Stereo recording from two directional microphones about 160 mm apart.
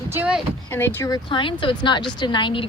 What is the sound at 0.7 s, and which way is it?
A woman's voice, 15° left (ahead or behind).